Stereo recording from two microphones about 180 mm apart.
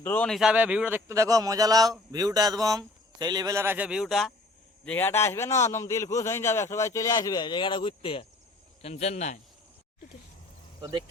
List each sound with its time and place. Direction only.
0.0 s a man's voice: 10° left (ahead or behind)
0.3 s speech: 5° right (ahead or behind)
4.9 s a man's voice: 10° left (ahead or behind); by 9.4 s 40° left (ahead or behind)
10.8 s speech: 25° right (ahead or behind)